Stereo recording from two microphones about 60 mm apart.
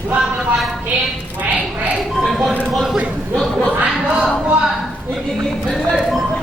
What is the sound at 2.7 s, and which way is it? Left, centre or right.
Speech, centre.